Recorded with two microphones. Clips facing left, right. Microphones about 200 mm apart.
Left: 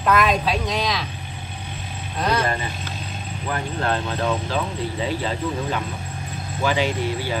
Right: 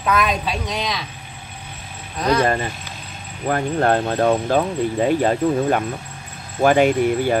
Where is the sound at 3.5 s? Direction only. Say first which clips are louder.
Right 7 dB; 50° right (ahead or behind).